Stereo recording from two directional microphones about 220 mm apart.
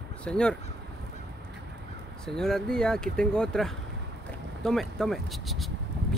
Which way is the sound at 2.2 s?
Centre (ahead or behind).